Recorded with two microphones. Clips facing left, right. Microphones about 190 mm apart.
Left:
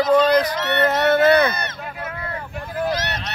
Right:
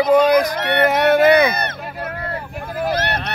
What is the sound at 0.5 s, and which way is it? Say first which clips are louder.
Speech: right 2 dB; 55° right (ahead or behind).